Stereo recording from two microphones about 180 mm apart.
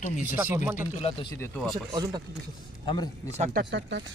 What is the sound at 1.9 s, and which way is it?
Speech, 20° right (ahead or behind).